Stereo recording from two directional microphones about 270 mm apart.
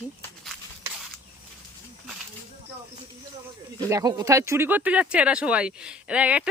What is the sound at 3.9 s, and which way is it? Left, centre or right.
Speech, centre.